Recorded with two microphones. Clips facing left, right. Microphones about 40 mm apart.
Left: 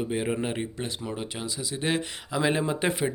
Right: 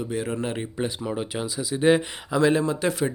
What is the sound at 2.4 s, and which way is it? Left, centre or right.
Speech, left.